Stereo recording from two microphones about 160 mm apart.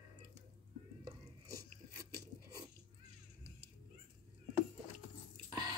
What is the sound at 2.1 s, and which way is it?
Chewing, 25° right (ahead or behind).